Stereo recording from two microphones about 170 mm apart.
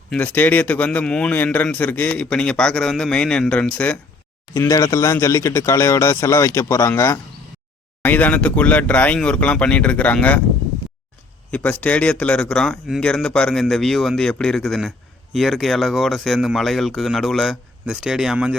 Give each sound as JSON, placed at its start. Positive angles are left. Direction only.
{"t": 0.1, "sound": "a man's voice", "side_deg": 10}
{"t": 11.5, "sound": "speech", "side_deg": 10}